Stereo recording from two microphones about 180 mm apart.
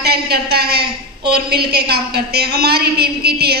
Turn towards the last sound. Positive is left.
turn(degrees=-60)  # may be behind; listen again after turning